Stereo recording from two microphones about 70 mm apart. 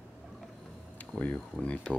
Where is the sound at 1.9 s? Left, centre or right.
Centre.